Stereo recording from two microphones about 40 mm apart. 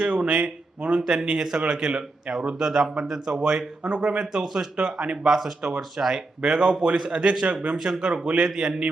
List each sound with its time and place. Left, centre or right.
0.0 s speech: right
1.4 s speech: centre
1.6 s speech: right
3.8 s speech: right
4.2 s speech: centre
5.1 s speech: centre
6.4 s speech: right